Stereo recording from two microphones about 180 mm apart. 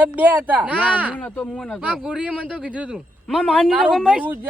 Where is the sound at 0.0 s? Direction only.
10° right (ahead or behind).